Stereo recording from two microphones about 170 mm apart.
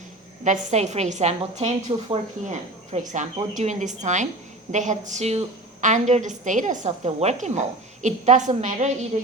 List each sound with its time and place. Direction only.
0.4 s a woman's voice: 45° right (ahead or behind)